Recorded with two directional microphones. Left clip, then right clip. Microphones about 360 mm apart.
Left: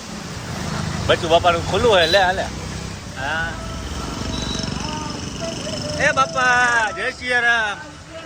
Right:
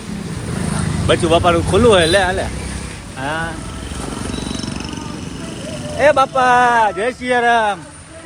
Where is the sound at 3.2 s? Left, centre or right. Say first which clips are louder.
Right 2 dB; centre.